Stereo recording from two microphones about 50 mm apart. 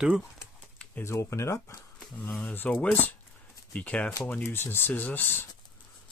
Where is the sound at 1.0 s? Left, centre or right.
Left.